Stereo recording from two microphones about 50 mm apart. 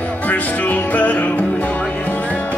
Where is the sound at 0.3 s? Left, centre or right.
Left.